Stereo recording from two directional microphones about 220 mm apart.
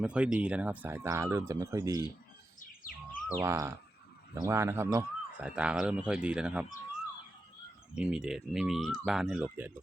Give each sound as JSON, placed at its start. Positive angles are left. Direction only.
{"t": 0.0, "sound": "speech", "side_deg": -5}
{"t": 2.6, "sound": "bird", "side_deg": 40}
{"t": 3.2, "sound": "speech", "side_deg": -10}
{"t": 7.9, "sound": "speech", "side_deg": -5}